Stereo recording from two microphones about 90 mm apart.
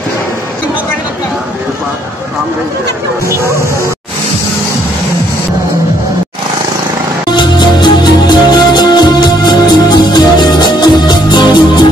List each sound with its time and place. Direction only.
7.2 s music: 55° left (ahead or behind)